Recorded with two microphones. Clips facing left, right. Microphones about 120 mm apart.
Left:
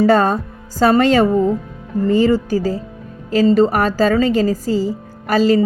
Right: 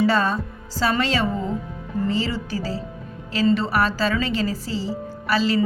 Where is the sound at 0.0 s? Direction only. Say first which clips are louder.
Left 7 dB; 50° left (ahead or behind).